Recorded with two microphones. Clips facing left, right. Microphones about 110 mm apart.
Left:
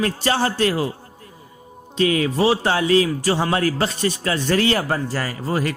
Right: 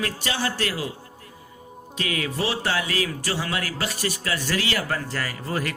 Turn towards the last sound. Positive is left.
turn(degrees=25)  # may be behind; listen again after turning